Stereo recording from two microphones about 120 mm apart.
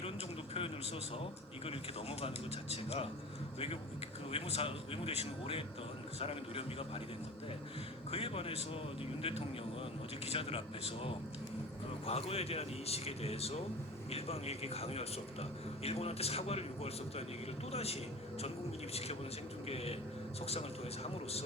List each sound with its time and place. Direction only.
1.1 s speech: 50° left (ahead or behind)
4.3 s speech: 55° left (ahead or behind)
8.1 s speech: 55° left (ahead or behind)
10.2 s a man's voice: 50° left (ahead or behind)
19.6 s a man's voice: 55° left (ahead or behind)